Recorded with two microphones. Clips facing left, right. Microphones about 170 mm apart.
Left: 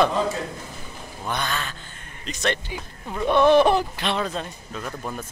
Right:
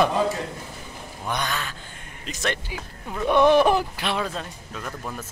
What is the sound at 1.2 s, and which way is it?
Speech, 10° right (ahead or behind).